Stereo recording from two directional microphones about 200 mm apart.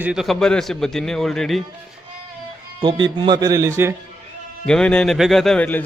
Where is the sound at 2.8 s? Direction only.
20° right (ahead or behind).